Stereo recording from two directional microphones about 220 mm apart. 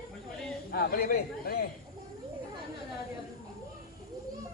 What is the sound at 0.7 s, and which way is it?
Speech, 45° left (ahead or behind).